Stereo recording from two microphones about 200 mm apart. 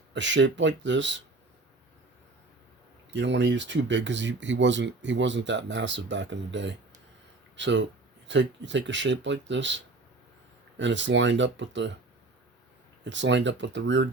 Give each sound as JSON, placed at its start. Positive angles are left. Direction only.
{"t": 0.1, "sound": "speech", "side_deg": -65}
{"t": 3.1, "sound": "speech", "side_deg": -65}
{"t": 13.1, "sound": "speech", "side_deg": -65}